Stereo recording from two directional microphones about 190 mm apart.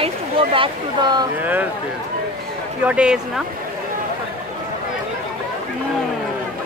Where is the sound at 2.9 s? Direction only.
5° right (ahead or behind).